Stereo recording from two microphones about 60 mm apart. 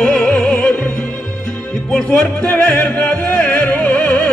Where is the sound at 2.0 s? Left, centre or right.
Left.